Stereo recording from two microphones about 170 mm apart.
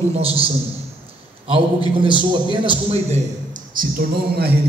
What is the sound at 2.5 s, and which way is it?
Speech, 35° right (ahead or behind).